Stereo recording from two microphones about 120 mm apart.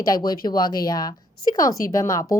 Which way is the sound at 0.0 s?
35° left (ahead or behind).